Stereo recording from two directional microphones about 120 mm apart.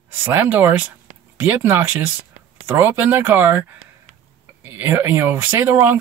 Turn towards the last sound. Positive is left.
turn(degrees=-15)  # may be behind; listen again after turning